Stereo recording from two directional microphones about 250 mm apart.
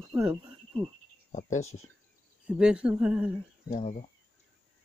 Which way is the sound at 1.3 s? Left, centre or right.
Left.